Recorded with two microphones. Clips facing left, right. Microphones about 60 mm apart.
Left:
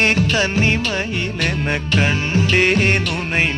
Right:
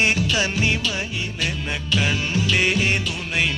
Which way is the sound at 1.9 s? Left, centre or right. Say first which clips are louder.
Left 3 dB; left.